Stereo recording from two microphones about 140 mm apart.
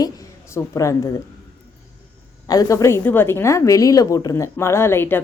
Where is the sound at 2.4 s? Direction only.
25° left (ahead or behind).